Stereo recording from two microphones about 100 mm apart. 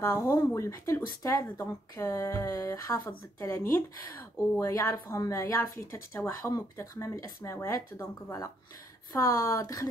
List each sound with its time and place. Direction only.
0.0 s speech: 30° left (ahead or behind)